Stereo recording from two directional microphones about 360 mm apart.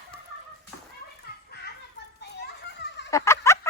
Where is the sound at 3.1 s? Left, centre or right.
Centre.